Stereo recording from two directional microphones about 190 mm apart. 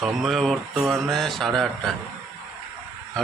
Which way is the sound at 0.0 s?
Centre (ahead or behind).